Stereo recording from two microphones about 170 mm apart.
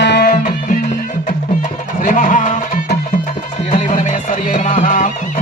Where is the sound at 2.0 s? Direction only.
50° left (ahead or behind).